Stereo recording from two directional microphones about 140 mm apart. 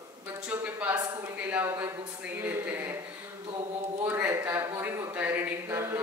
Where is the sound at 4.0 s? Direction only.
15° right (ahead or behind).